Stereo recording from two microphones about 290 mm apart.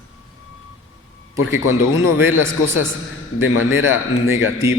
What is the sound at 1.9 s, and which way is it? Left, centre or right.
Speech, left.